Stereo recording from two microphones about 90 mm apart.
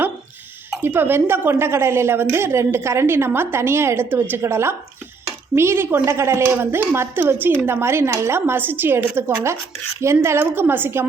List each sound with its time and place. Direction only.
0.8 s a woman's voice: 25° right (ahead or behind)